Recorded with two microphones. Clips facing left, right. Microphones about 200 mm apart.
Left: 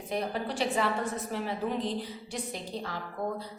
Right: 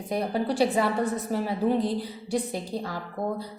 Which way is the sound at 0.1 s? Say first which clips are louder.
Right 5 dB; 35° right (ahead or behind).